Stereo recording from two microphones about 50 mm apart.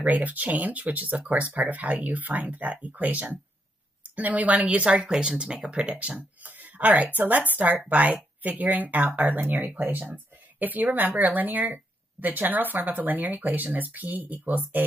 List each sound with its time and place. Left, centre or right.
0.0 s speech: right